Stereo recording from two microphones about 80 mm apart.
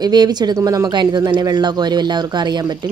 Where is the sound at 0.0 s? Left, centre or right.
Right.